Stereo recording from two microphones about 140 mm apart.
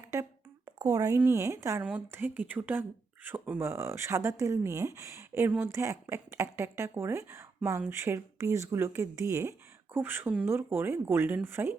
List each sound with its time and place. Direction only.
0.8 s speech: 25° right (ahead or behind)
1.8 s speech: 10° right (ahead or behind)